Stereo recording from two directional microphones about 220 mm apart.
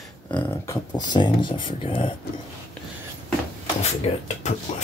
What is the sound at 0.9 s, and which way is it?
Speech, 20° left (ahead or behind).